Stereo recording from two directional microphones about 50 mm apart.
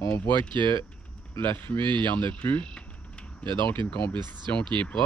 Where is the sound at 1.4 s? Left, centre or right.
Left.